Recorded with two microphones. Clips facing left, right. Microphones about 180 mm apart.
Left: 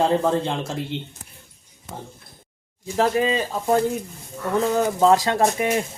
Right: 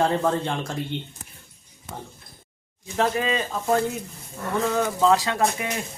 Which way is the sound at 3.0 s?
30° left (ahead or behind).